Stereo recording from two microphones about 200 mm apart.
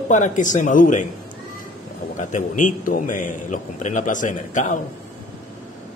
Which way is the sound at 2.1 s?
40° left (ahead or behind).